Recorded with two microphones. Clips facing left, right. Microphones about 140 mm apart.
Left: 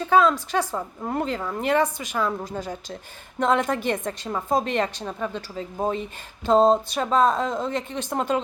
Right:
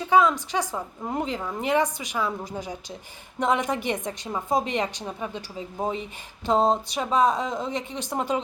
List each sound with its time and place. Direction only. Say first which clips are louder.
0.1 s a woman's voice: left 1 dB; 15° right (ahead or behind)